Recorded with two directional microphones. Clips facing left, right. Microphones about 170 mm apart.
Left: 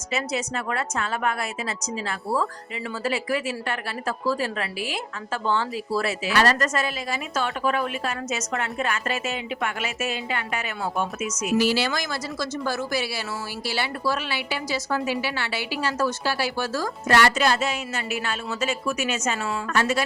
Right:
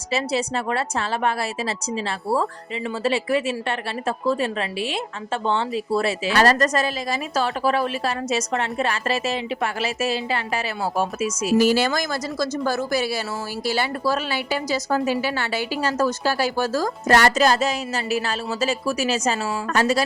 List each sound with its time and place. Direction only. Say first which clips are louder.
0.1 s a woman's voice: right 4 dB; 30° right (ahead or behind)
11.5 s a woman's voice: right 4 dB; 45° right (ahead or behind)